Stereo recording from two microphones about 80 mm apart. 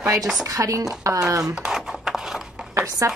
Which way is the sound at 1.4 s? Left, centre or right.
Centre.